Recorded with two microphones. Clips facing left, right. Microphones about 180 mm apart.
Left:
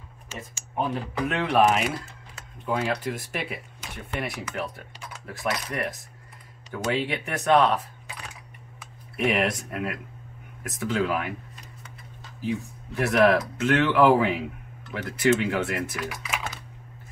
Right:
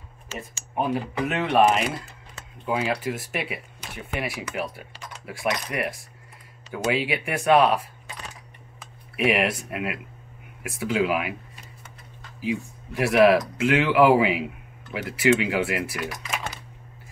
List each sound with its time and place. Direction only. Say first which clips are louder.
1.1 s speech: even; 5° right (ahead or behind)
9.1 s speech: right 2 dB; 5° right (ahead or behind)
10.6 s tick-tock: right 2 dB; 10° right (ahead or behind)
12.4 s speech: right 1 dB; 10° right (ahead or behind)